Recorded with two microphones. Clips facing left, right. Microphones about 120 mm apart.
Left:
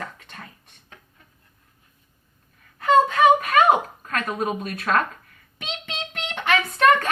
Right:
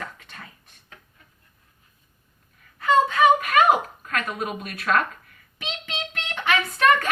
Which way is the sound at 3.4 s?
35° left (ahead or behind).